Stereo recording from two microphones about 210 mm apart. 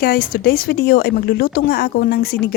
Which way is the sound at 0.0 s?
45° left (ahead or behind).